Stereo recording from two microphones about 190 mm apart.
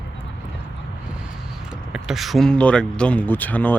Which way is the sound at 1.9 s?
Centre (ahead or behind).